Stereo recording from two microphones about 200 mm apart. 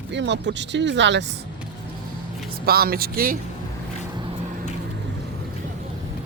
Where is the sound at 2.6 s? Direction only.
50° right (ahead or behind).